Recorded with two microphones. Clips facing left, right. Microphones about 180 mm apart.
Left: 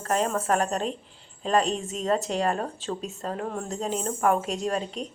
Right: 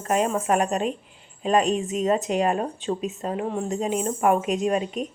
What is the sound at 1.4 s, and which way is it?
A woman's voice, 15° right (ahead or behind).